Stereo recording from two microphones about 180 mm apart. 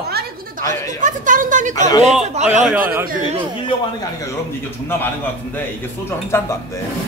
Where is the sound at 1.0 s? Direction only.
45° right (ahead or behind).